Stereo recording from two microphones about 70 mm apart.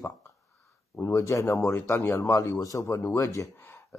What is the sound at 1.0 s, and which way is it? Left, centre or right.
Speech, left.